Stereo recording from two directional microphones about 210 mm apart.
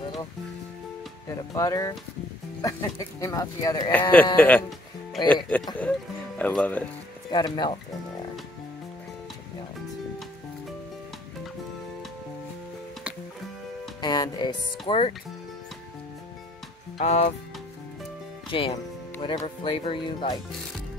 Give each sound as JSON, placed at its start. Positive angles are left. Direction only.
{"t": 1.5, "sound": "speech", "side_deg": 15}
{"t": 7.2, "sound": "speech", "side_deg": 20}
{"t": 14.0, "sound": "speech", "side_deg": 20}
{"t": 17.0, "sound": "music", "side_deg": 30}
{"t": 18.5, "sound": "speech", "side_deg": 25}